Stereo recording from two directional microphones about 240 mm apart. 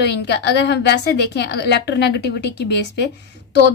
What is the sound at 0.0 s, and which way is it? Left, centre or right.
A woman's voice, left.